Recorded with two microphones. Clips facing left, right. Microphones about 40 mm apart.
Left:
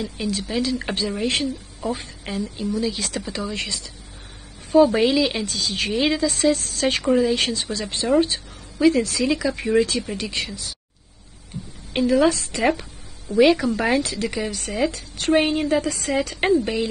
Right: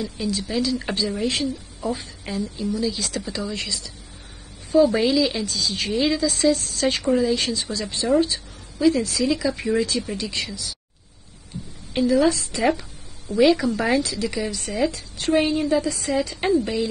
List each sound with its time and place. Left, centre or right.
0.0 s a woman's voice: left
11.9 s a woman's voice: left